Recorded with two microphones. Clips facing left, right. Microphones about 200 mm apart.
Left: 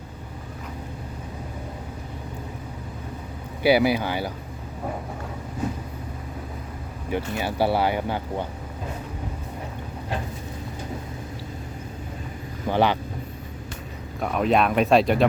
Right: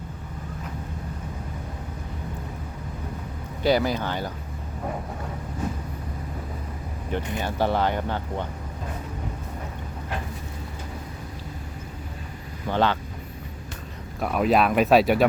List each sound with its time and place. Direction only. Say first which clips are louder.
3.6 s speech: left 3 dB; 10° left (ahead or behind)
7.2 s speech: left 2 dB; 20° right (ahead or behind)
7.4 s speech: left 1 dB; 10° left (ahead or behind)
12.6 s speech: left 2 dB; 15° left (ahead or behind)
14.2 s speech: even; centre (ahead or behind)